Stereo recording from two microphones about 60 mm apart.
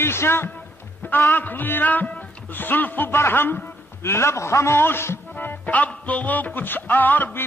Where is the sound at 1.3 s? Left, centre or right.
Left.